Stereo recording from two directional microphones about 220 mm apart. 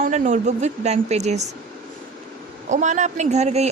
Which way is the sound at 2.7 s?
35° right (ahead or behind).